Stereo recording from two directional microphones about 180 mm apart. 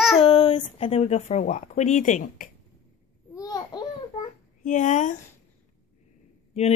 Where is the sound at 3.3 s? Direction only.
20° left (ahead or behind).